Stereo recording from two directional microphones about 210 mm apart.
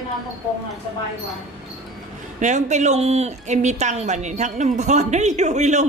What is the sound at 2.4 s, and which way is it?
A woman's voice, 35° right (ahead or behind).